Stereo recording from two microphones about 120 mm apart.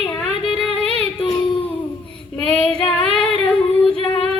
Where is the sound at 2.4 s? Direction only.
5° left (ahead or behind).